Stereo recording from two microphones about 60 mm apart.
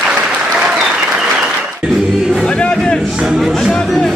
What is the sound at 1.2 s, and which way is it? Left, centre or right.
Choir, centre.